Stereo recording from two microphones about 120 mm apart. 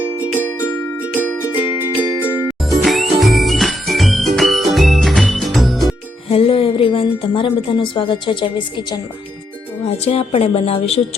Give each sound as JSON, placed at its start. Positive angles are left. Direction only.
{"t": 0.2, "sound": "music", "side_deg": -15}
{"t": 2.6, "sound": "jingle bell", "side_deg": 0}
{"t": 6.2, "sound": "a woman's voice", "side_deg": 50}
{"t": 9.8, "sound": "a woman's voice", "side_deg": 60}